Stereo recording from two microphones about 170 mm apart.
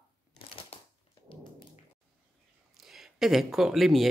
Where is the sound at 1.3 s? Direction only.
30° left (ahead or behind).